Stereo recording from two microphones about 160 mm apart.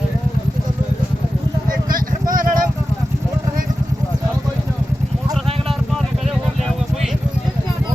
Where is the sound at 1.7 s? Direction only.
60° right (ahead or behind).